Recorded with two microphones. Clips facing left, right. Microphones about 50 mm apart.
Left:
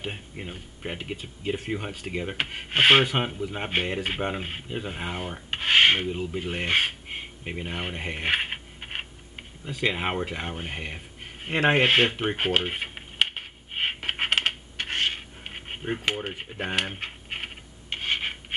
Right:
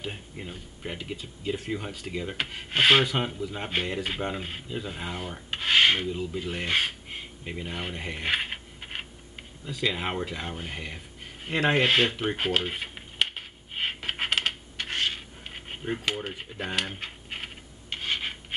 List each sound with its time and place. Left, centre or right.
0.0 s speech: left
5.3 s rub: left
9.7 s speech: left
13.7 s coin: left